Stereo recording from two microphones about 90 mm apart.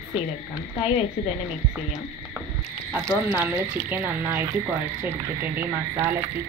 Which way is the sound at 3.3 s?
20° right (ahead or behind).